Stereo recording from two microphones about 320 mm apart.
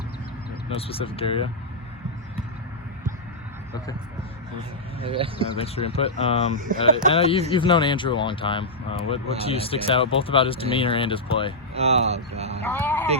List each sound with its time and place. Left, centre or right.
0.7 s speech: centre
5.0 s speech: centre
5.5 s speech: centre
6.7 s speech: right
7.1 s speech: centre
11.7 s speech: centre
12.6 s speech: centre